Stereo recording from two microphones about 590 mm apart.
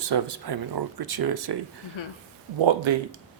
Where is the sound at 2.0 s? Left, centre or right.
Left.